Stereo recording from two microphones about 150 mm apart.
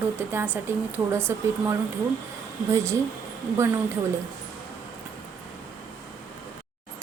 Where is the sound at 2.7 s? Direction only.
20° right (ahead or behind).